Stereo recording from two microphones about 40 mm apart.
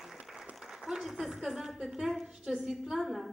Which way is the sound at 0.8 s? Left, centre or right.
Centre.